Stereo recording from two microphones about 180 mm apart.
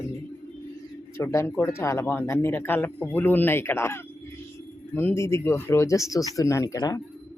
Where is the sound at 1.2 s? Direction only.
15° left (ahead or behind).